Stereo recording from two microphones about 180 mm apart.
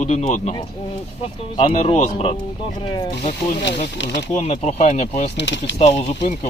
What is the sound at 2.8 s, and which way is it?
Speech, 25° left (ahead or behind).